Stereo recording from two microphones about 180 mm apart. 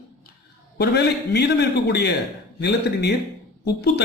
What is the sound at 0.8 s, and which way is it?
A man's voice, 65° left (ahead or behind).